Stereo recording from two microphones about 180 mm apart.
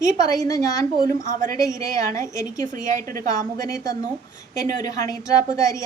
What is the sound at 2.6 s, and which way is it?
Speech, 45° right (ahead or behind).